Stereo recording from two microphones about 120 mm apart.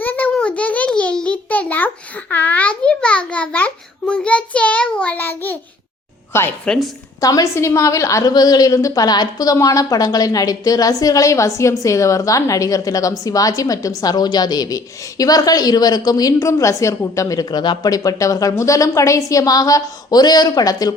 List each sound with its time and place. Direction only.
0.0 s a sound: 15° left (ahead or behind)
6.7 s a woman's voice: centre (ahead or behind)
7.2 s a woman's voice: 30° left (ahead or behind)